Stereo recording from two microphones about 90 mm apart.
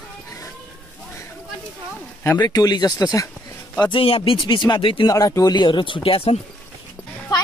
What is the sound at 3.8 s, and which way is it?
Speech, 80° left.